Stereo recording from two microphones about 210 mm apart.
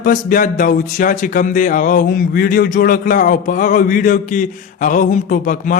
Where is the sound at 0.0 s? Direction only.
40° left (ahead or behind).